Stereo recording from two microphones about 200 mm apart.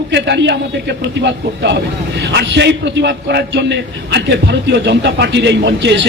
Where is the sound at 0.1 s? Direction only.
60° right (ahead or behind).